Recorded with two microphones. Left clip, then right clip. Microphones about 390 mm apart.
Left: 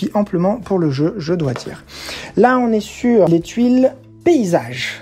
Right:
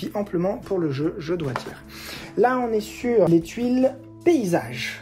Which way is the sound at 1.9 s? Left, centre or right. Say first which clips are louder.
Left 9 dB; centre.